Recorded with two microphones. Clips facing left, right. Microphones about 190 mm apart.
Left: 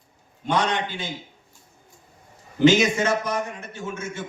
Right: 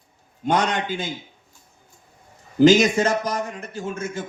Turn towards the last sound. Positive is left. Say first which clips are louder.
# right 3 dB
turn(degrees=-35)  # may be behind; listen again after turning